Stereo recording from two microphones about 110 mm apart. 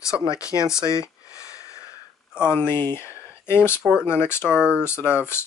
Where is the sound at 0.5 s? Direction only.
30° left (ahead or behind).